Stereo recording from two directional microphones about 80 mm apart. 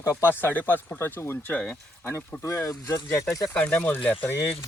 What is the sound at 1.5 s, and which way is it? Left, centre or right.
Speech, centre.